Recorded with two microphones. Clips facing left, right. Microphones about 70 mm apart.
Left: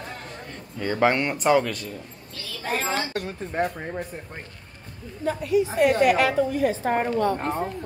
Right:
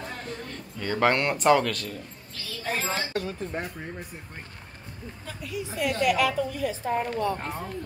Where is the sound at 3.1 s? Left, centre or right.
Left.